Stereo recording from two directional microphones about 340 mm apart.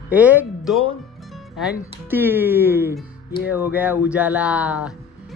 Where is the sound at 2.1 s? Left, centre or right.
Centre.